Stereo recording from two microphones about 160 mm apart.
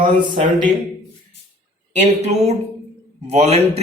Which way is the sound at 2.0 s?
45° right (ahead or behind).